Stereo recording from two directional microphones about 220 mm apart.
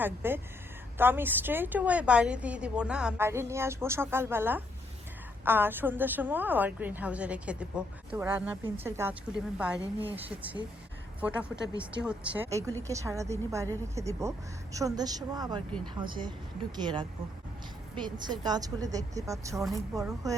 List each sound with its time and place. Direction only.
0.0 s a woman's voice: 10° right (ahead or behind)